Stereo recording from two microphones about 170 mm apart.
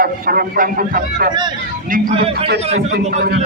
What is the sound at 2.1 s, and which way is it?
Speech, 35° right (ahead or behind).